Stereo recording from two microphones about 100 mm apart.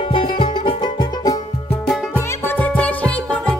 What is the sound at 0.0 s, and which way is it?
Music, 55° left (ahead or behind).